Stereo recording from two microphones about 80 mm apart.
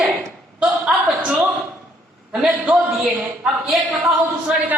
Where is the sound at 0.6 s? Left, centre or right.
Centre.